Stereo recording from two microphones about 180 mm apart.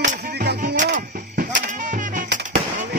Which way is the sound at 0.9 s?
45° right (ahead or behind).